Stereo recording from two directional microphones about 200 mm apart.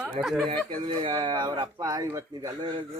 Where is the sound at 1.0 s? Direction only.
25° right (ahead or behind).